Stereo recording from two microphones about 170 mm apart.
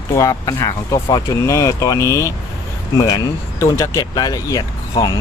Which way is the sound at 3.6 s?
15° left (ahead or behind).